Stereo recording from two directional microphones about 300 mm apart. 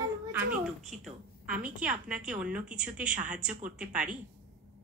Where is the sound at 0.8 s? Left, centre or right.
Centre.